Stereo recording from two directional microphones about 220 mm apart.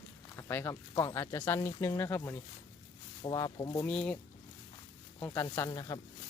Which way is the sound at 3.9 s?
5° left (ahead or behind).